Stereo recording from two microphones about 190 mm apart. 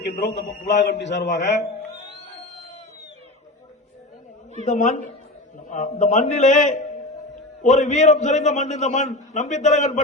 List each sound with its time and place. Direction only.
0.0 s a man's voice: 65° left (ahead or behind)
4.6 s a man's voice: 40° left (ahead or behind)